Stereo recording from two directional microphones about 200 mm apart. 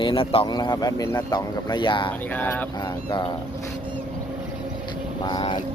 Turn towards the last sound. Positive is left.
turn(degrees=25)  # may be behind; listen again after turning